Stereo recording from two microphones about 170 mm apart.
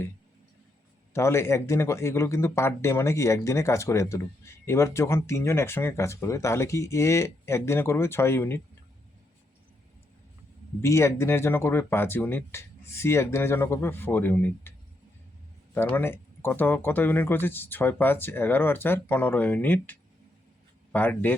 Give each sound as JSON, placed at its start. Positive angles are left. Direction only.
{"t": 1.1, "sound": "speech", "side_deg": 15}
{"t": 10.8, "sound": "speech", "side_deg": 15}
{"t": 15.7, "sound": "speech", "side_deg": 15}